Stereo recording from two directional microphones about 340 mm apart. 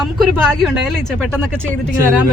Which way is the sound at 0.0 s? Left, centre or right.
Centre.